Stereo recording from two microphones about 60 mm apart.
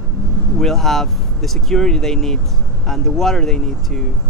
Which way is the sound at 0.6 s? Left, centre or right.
Centre.